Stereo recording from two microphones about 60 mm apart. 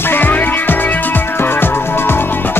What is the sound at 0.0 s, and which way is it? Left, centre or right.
Music, left.